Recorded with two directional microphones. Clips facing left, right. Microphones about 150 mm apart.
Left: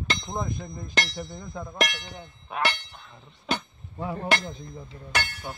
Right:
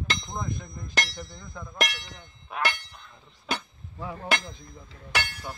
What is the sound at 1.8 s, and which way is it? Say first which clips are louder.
Speech: left 2 dB; centre (ahead or behind).